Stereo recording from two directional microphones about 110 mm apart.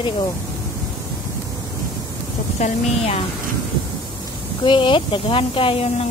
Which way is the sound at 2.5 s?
80° left.